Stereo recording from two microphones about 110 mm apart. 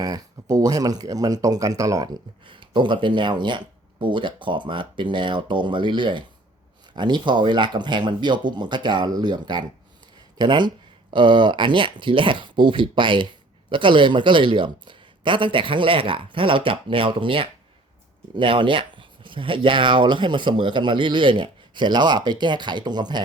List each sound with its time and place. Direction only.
0.0 s speech: 35° right (ahead or behind)
2.5 s speech: 45° right (ahead or behind)